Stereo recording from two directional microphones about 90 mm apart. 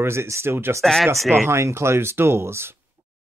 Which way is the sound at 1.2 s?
30° right (ahead or behind).